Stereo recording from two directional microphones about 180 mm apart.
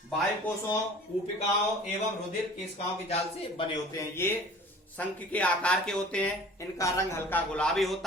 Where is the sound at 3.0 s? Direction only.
35° left (ahead or behind).